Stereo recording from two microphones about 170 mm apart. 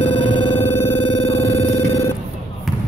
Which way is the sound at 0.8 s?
35° left (ahead or behind).